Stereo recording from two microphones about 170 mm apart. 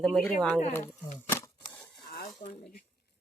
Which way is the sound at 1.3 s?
15° left (ahead or behind).